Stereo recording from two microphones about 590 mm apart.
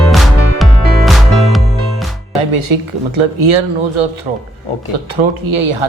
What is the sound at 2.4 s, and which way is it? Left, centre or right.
Speech, right.